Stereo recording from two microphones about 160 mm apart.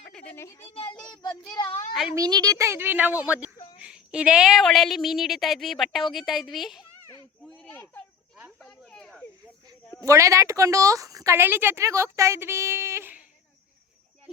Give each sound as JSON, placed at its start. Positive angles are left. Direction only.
{"t": 0.1, "sound": "a sound", "side_deg": 5}
{"t": 0.3, "sound": "speech", "side_deg": 20}
{"t": 0.6, "sound": "a child's voice", "side_deg": 35}
{"t": 0.9, "sound": "a woman's voice", "side_deg": 5}
{"t": 2.1, "sound": "a woman's voice", "side_deg": -25}
{"t": 7.4, "sound": "a sound", "side_deg": 5}
{"t": 8.5, "sound": "snake", "side_deg": 5}
{"t": 10.0, "sound": "a woman's voice", "side_deg": -20}